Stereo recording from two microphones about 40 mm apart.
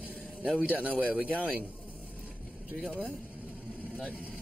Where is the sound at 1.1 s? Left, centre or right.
Right.